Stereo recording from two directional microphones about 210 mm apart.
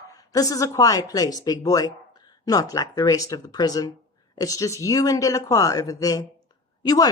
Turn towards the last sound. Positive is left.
turn(degrees=20)  # may be behind; listen again after turning